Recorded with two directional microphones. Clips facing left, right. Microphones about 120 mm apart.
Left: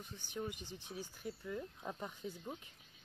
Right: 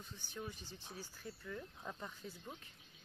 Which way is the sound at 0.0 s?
15° left (ahead or behind).